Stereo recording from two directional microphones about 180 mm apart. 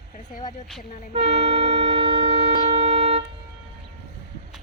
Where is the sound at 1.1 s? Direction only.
35° right (ahead or behind).